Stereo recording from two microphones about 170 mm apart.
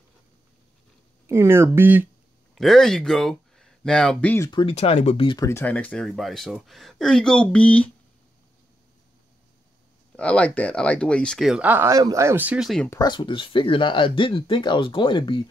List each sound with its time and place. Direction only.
1.2 s speech: 15° right (ahead or behind)
2.5 s speech: centre (ahead or behind)
4.5 s speech: 30° left (ahead or behind)
5.4 s speech: 15° left (ahead or behind)
10.1 s speech: 5° left (ahead or behind)
12.9 s speech: 25° left (ahead or behind)